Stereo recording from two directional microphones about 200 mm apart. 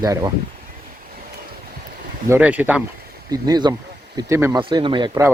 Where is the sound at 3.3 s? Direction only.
20° right (ahead or behind).